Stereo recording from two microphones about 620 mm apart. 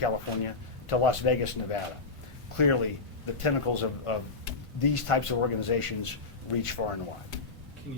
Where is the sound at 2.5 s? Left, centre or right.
Left.